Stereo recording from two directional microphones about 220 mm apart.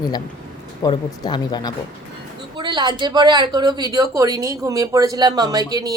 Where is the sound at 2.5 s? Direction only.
20° right (ahead or behind).